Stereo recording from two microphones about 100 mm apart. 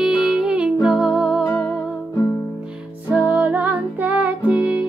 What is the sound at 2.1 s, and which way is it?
Music, 30° left (ahead or behind).